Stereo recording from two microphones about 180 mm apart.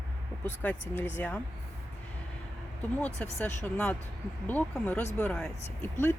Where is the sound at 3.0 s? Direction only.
10° left (ahead or behind).